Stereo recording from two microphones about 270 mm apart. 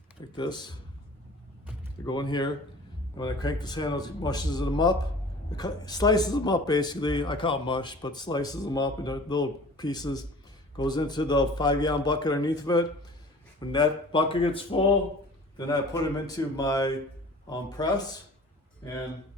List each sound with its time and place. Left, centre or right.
0.3 s speech: centre
2.0 s speech: centre